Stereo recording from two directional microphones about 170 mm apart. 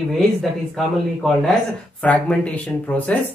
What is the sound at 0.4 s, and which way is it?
Speech, centre (ahead or behind).